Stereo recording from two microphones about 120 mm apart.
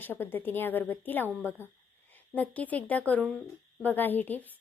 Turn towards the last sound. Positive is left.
turn(degrees=15)  # may be behind; listen again after turning